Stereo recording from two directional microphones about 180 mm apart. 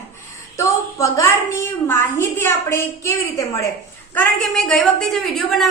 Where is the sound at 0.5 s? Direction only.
15° left (ahead or behind).